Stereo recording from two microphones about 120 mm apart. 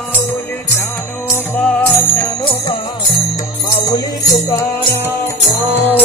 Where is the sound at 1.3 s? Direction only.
10° left (ahead or behind).